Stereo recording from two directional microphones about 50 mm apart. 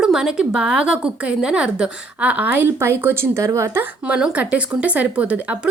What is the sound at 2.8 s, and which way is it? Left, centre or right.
Speech, right.